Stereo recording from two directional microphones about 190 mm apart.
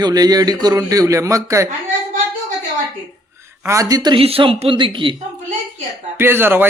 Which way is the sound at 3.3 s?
15° right (ahead or behind).